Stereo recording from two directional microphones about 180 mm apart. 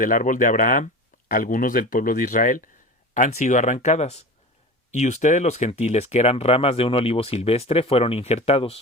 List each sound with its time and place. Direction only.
0.0 s speech: 50° left (ahead or behind); by 8.8 s 35° left (ahead or behind)